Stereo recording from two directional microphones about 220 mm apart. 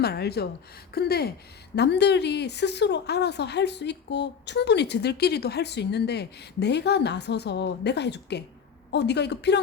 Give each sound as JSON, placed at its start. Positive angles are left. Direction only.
{"t": 0.0, "sound": "speech", "side_deg": 45}